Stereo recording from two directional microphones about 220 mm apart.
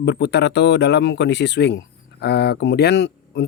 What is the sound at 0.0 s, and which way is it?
Speech, 50° left (ahead or behind).